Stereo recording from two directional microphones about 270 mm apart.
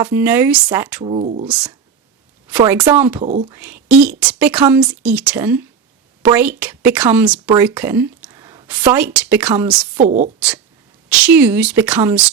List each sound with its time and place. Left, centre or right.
0.0 s a woman's voice: centre
1.0 s speech: right
2.5 s a woman's voice: centre
3.2 s speech: right
3.5 s a woman's voice: centre
10.0 s speech: right
11.1 s a woman's voice: centre